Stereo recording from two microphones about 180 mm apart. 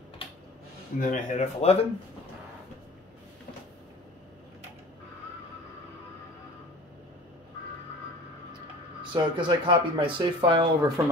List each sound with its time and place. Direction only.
0.9 s speech: 45° left (ahead or behind)
9.0 s speech: 25° right (ahead or behind)